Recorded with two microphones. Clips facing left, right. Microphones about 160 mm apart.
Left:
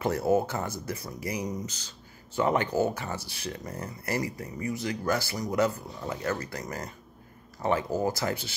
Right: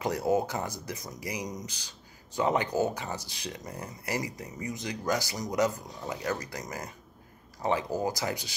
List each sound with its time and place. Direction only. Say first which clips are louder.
0.0 s speech: left 2 dB; 15° right (ahead or behind)